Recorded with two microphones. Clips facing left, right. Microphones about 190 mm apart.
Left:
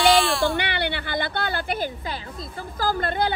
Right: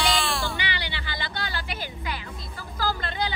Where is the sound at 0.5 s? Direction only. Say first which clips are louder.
Left 7 dB; 60° left (ahead or behind).